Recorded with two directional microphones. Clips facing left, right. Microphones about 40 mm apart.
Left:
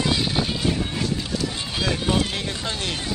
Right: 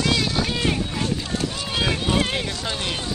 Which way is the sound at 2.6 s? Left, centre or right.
Centre.